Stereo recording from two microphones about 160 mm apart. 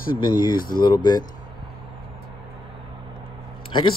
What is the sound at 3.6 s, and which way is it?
Speech, 30° left (ahead or behind).